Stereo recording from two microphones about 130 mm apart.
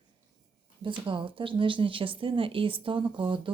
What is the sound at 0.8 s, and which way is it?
Speech, 40° right (ahead or behind).